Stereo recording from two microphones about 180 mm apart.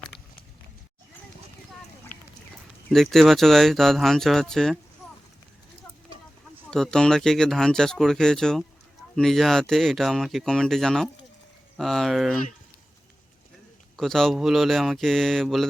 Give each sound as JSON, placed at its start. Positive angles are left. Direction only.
{"t": 2.1, "sound": "duck", "side_deg": 45}
{"t": 2.9, "sound": "speech", "side_deg": 0}
{"t": 6.7, "sound": "speech", "side_deg": 0}
{"t": 13.9, "sound": "speech", "side_deg": 0}